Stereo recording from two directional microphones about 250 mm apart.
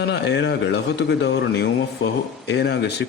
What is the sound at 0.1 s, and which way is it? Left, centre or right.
Speech, left.